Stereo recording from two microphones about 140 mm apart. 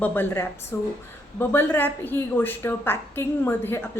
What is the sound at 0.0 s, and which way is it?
A woman's voice, 15° left (ahead or behind).